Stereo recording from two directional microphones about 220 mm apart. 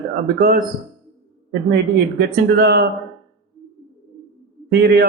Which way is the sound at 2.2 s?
50° right (ahead or behind).